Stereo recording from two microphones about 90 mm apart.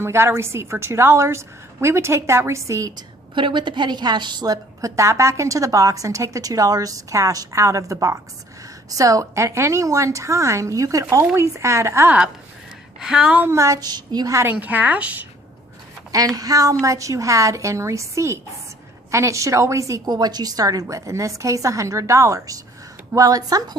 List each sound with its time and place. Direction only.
0.0 s a woman's voice: 25° right (ahead or behind)
3.3 s a woman's voice: 65° right (ahead or behind); by 12.1 s 30° right (ahead or behind)
13.0 s a woman's voice: 5° right (ahead or behind)
13.5 s a woman's voice: 35° right (ahead or behind)
14.5 s a woman's voice: 20° right (ahead or behind)
16.1 s a woman's voice: 40° right (ahead or behind)
20.1 s a woman's voice: 50° right (ahead or behind)